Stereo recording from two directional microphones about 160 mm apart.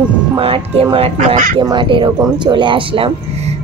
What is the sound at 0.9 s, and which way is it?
Speech, 40° right (ahead or behind).